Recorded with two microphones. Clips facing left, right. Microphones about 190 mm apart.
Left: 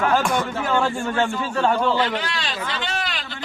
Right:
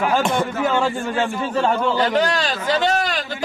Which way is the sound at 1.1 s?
15° right (ahead or behind).